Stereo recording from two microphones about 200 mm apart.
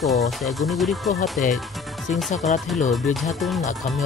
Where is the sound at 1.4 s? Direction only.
40° left (ahead or behind).